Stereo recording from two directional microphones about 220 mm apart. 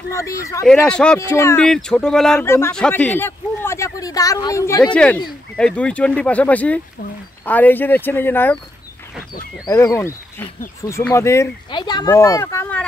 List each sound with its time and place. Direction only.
0.1 s speech: 15° left (ahead or behind)
9.7 s speech: 15° left (ahead or behind)